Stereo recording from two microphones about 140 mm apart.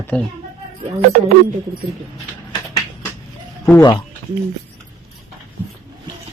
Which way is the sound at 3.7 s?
20° left (ahead or behind).